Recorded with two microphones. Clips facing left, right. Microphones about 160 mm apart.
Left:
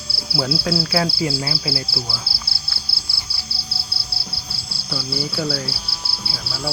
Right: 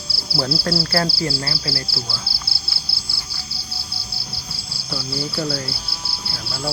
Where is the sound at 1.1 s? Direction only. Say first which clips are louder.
Left 2 dB; 20° left (ahead or behind).